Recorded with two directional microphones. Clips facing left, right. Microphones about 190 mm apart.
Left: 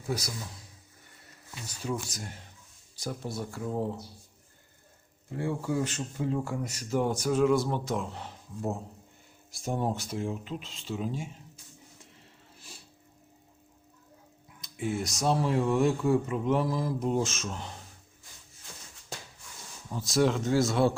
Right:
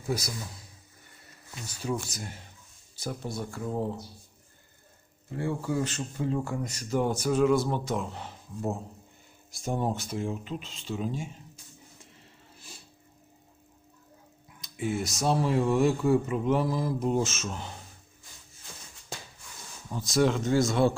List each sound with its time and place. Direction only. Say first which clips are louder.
2.0 s speech: right 1 dB; 5° right (ahead or behind)
5.3 s speech: even; 10° left (ahead or behind)
14.6 s speech: right 1 dB; 5° right (ahead or behind)
19.9 s speech: right 1 dB; centre (ahead or behind)